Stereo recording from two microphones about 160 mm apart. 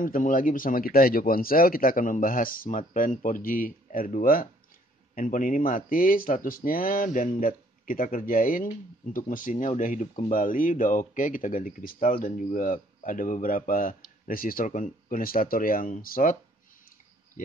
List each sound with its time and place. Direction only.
0.0 s speech: 55° left (ahead or behind)